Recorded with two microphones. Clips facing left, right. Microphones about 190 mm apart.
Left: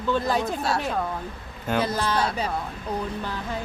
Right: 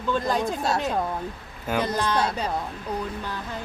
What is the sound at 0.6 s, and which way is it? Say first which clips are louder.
Speech: right 1 dB; 20° right (ahead or behind).